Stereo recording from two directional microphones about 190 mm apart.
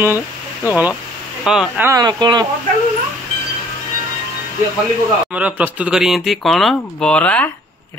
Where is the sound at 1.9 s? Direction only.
20° right (ahead or behind).